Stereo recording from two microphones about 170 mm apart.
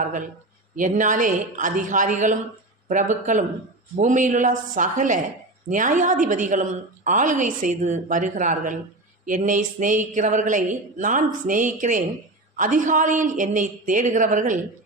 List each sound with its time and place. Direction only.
0.8 s a woman's voice: 50° right (ahead or behind)